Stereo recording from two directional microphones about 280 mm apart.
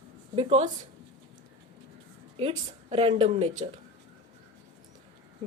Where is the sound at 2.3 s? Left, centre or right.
Centre.